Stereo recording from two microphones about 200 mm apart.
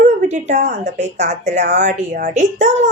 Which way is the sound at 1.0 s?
35° right (ahead or behind).